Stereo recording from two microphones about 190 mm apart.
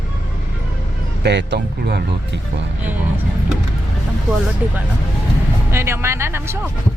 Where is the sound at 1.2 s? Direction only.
65° right (ahead or behind).